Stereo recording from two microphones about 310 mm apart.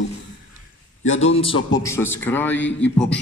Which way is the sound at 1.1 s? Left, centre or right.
Left.